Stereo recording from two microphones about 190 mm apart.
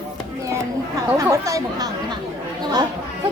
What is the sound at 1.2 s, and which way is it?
Speech, 15° right (ahead or behind).